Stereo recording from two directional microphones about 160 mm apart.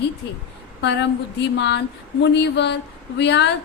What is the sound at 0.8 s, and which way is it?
A woman's voice, 90° left.